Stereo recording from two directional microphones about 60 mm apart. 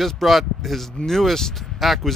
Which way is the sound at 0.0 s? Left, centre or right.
Centre.